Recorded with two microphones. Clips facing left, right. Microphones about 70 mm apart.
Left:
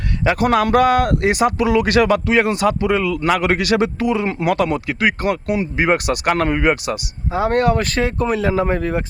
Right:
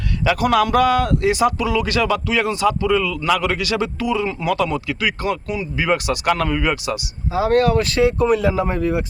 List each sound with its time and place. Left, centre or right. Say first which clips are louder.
0.3 s speech: left 1 dB; left